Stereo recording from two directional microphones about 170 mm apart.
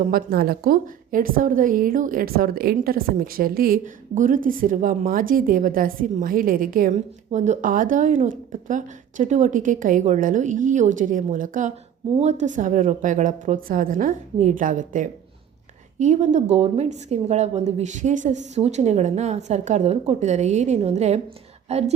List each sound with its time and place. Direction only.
0.0 s a woman's voice: 55° right (ahead or behind)
7.3 s a woman's voice: 45° right (ahead or behind)